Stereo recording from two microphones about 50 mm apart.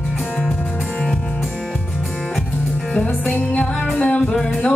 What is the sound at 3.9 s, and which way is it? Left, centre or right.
Music, left.